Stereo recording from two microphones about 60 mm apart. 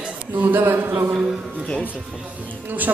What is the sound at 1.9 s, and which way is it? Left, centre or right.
Speech, centre.